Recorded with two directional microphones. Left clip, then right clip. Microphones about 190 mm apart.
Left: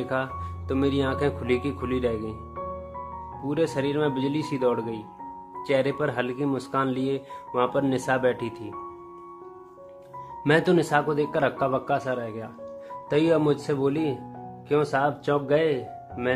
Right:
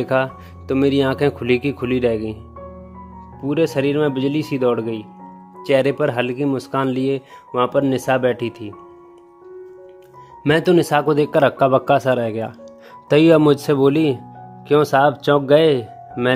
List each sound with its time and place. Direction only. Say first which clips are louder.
0.0 s speech: right 9 dB; 45° right (ahead or behind)
3.4 s speech: right 8 dB; 40° right (ahead or behind)
10.4 s speech: right 6 dB; 35° right (ahead or behind)
10.9 s speech: right 7 dB; 50° right (ahead or behind)